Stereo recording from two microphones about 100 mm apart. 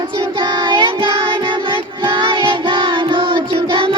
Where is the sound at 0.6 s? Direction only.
55° right (ahead or behind).